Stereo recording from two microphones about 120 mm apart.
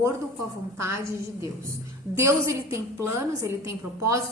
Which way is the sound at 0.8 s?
25° right (ahead or behind).